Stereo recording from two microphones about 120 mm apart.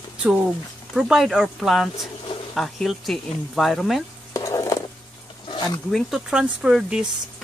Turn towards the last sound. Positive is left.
turn(degrees=-5)  # may be behind; listen again after turning